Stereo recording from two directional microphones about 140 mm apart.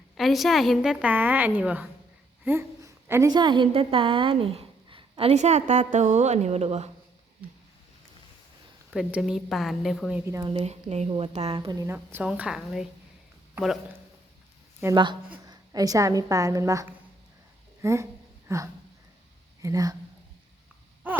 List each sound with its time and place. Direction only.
0.2 s a woman's voice: centre (ahead or behind); by 6.9 s 50° right (ahead or behind)
8.9 s a woman's voice: 5° right (ahead or behind)
10.2 s a woman's voice: 20° right (ahead or behind)
10.4 s a woman's voice: 45° right (ahead or behind)
11.7 s a woman's voice: 20° right (ahead or behind)
12.2 s a woman's voice: 5° right (ahead or behind)
14.8 s a woman's voice: 15° right (ahead or behind)
15.4 s a woman's voice: 25° right (ahead or behind)
21.0 s gasp: 10° right (ahead or behind)